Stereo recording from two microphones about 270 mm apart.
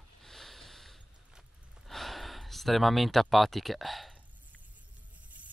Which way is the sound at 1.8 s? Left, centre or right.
Centre.